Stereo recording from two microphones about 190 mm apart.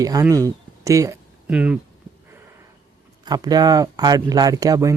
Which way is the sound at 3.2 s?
20° right (ahead or behind).